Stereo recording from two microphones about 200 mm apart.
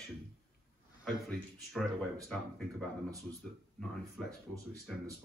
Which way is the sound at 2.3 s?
5° left (ahead or behind).